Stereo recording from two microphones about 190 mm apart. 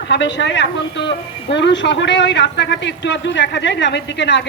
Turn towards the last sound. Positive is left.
turn(degrees=65)  # may be behind; listen again after turning